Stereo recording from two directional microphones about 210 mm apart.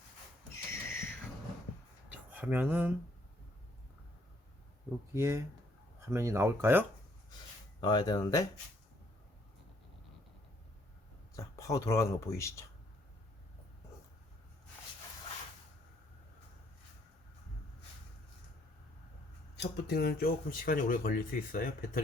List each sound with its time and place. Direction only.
0.5 s a sound: 10° left (ahead or behind)
2.3 s speech: 10° right (ahead or behind)
5.1 s speech: 15° right (ahead or behind)
7.8 s speech: 20° left (ahead or behind)
11.3 s speech: 15° left (ahead or behind)
19.5 s speech: 50° left (ahead or behind)